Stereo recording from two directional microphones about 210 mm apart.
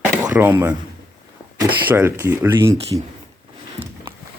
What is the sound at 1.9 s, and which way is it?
Speech, 10° right (ahead or behind).